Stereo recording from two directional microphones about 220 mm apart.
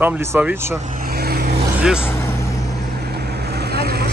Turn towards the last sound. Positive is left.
turn(degrees=-45)  # may be behind; listen again after turning